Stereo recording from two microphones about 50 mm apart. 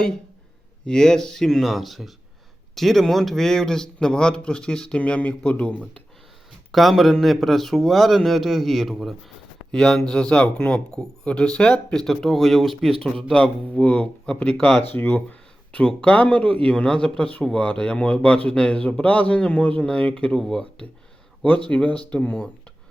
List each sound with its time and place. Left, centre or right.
0.9 s a man's voice: centre
6.7 s a man's voice: centre
12.0 s speech: centre
13.0 s a man's voice: centre
13.3 s a man's voice: left
21.6 s a man's voice: left